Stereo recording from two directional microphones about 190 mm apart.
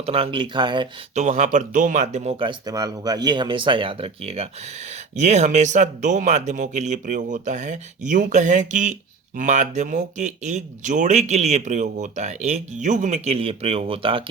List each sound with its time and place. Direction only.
0.0 s speech: 30° right (ahead or behind)
1.1 s speech: 40° right (ahead or behind)